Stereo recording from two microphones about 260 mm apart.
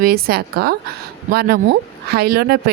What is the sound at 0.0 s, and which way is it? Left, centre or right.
Speech, right.